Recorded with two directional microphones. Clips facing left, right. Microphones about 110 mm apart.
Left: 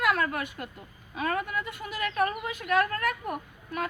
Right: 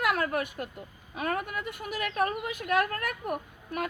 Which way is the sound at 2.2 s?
35° right (ahead or behind).